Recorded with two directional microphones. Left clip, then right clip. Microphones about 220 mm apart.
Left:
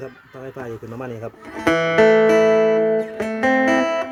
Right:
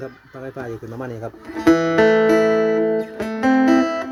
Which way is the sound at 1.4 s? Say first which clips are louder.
Right 2 dB; 35° left (ahead or behind).